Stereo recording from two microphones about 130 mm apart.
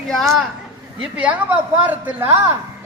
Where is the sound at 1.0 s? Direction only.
10° right (ahead or behind).